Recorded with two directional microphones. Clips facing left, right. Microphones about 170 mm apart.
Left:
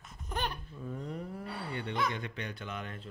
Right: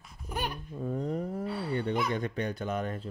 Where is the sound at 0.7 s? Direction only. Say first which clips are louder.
Right 8 dB; 40° right (ahead or behind).